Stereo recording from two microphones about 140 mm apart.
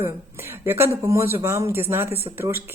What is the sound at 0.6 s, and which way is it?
Speech, 15° right (ahead or behind).